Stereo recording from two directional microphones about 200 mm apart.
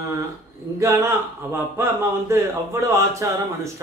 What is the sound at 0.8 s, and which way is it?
Speech, 10° right (ahead or behind).